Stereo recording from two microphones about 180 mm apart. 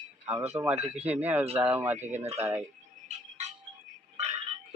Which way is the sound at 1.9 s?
40° right (ahead or behind).